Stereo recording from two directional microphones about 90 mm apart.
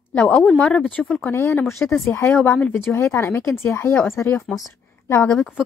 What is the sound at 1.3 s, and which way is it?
Speech, 30° left (ahead or behind).